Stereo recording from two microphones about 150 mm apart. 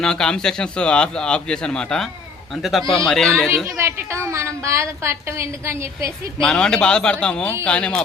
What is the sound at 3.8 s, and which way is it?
A woman's voice, 15° right (ahead or behind).